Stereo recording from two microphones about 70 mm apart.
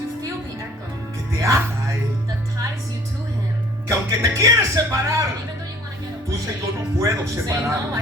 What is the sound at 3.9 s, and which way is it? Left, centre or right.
Music, right.